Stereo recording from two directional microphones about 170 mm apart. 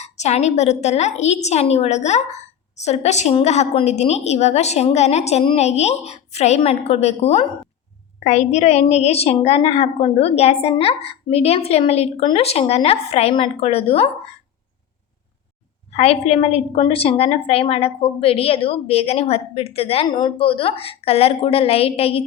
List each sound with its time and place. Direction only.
0.0 s a woman's voice: 40° left (ahead or behind)
15.9 s a woman's voice: 40° left (ahead or behind)